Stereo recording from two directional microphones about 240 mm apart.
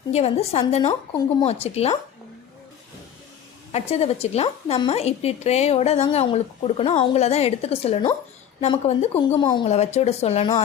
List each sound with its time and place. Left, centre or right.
0.1 s a woman's voice: left
3.7 s a woman's voice: left